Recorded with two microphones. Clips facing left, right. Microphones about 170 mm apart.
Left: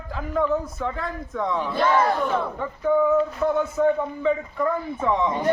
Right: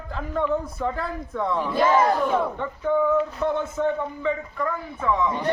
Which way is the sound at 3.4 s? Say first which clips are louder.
Left 2 dB; 5° left (ahead or behind).